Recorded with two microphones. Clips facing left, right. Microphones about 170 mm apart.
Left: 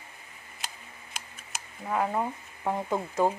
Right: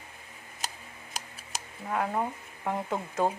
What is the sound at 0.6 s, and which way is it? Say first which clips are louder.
Tick: right 3 dB; 40° right (ahead or behind).